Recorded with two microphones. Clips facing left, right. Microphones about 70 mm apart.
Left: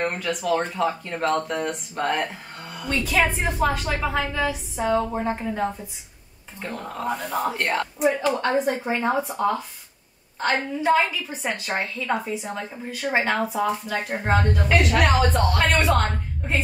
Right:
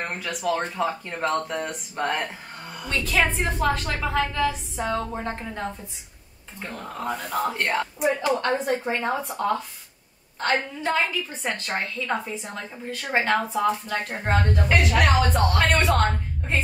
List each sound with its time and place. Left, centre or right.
0.0 s a woman's voice: centre